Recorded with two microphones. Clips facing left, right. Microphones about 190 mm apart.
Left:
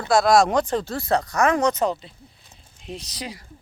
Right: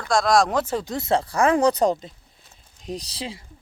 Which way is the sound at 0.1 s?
5° left (ahead or behind).